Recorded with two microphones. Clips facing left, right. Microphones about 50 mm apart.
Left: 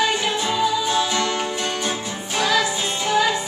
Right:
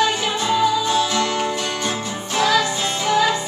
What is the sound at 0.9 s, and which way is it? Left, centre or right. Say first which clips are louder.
Music: right 2 dB; centre.